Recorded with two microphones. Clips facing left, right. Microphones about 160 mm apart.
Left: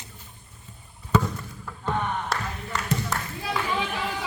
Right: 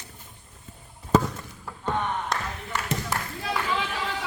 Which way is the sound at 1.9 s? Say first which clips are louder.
Even; 5° left (ahead or behind).